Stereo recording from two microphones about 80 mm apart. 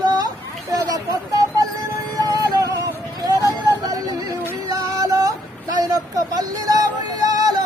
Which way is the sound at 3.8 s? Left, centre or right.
Right.